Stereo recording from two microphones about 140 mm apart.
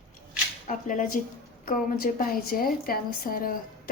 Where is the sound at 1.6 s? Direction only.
90° left.